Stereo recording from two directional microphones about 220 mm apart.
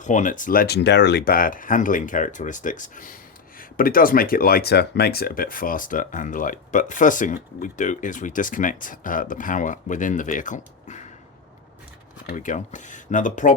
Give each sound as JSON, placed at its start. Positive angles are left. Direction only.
{"t": 0.0, "sound": "speech", "side_deg": 35}
{"t": 12.2, "sound": "speech", "side_deg": 40}